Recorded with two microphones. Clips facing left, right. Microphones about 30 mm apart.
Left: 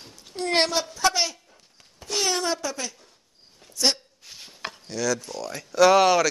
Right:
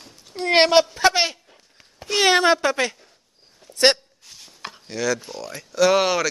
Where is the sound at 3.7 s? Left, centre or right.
Right.